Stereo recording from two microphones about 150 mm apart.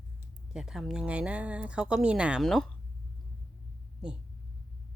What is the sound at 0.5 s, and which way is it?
Speech, 5° right (ahead or behind).